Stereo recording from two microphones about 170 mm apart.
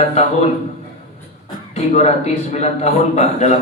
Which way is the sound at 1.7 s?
40° left (ahead or behind).